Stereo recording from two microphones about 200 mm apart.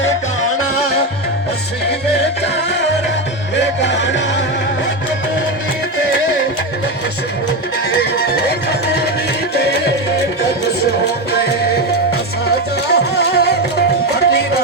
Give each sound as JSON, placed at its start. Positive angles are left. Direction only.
{"t": 3.6, "sound": "music", "side_deg": 60}
{"t": 12.9, "sound": "music", "side_deg": 55}